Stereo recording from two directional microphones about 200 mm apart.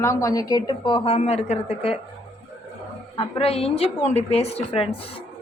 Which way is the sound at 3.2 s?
30° left (ahead or behind).